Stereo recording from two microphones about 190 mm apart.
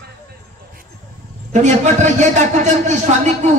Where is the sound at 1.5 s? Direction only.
40° right (ahead or behind).